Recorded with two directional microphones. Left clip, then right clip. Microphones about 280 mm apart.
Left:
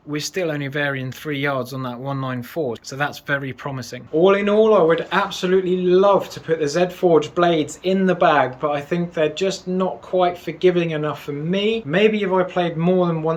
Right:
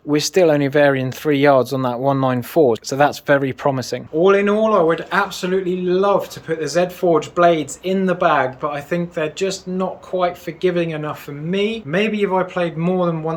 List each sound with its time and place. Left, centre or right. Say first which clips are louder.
0.1 s speech: right 9 dB; centre
4.2 s speech: right 1 dB; centre